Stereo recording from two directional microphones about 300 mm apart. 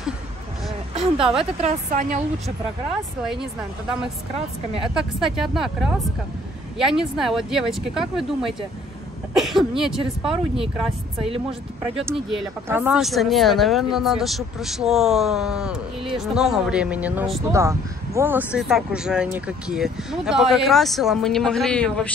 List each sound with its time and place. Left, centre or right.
0.9 s a woman's voice: centre
4.9 s speech: centre
12.1 s speech: centre